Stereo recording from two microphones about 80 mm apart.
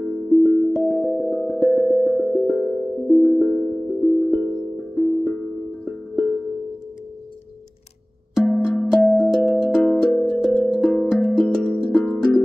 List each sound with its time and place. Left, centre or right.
0.0 s music: centre
8.5 s music: centre